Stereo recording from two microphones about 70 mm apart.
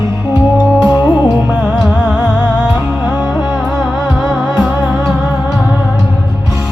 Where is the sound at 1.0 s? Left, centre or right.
Centre.